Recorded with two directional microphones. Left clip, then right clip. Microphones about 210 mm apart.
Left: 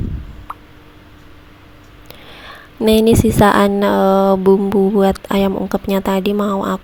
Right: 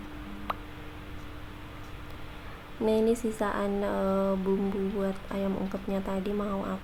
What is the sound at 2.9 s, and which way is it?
A woman's voice, 45° left (ahead or behind).